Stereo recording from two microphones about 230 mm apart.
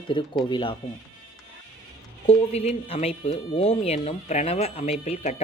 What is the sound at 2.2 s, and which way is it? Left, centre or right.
Speech, left.